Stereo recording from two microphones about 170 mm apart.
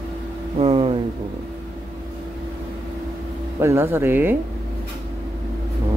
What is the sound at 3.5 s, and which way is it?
Speech, 15° right (ahead or behind).